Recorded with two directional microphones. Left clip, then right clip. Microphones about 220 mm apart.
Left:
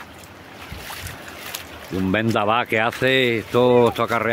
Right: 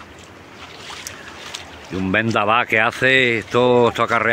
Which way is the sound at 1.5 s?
40° left (ahead or behind).